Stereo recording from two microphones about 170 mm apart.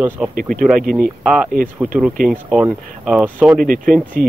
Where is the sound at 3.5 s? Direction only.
55° right (ahead or behind).